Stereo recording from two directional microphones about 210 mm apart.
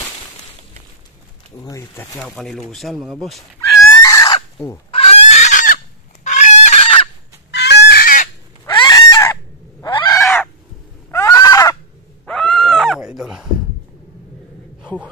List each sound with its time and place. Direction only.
1.6 s speech: 15° left (ahead or behind)
3.9 s chicken: 15° left (ahead or behind)
7.5 s chicken: 55° left (ahead or behind)
8.6 s fowl: 20° left (ahead or behind)
11.1 s neigh: 15° left (ahead or behind)
12.3 s dog: centre (ahead or behind)